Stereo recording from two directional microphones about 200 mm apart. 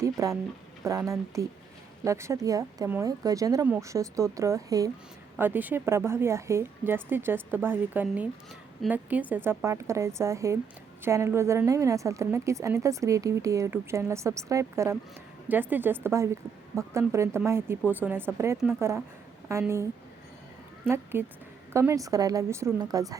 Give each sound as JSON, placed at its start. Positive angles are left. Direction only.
{"t": 0.0, "sound": "a woman's voice", "side_deg": -15}